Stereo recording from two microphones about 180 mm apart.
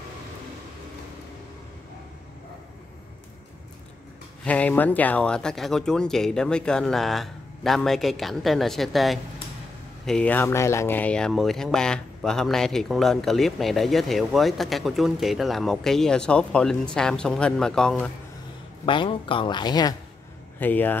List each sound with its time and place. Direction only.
4.5 s speech: 10° left (ahead or behind)
18.9 s a woman's voice: 30° left (ahead or behind)
20.5 s speech: 10° left (ahead or behind)